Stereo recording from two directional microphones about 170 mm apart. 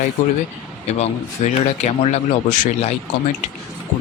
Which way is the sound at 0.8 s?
40° left (ahead or behind).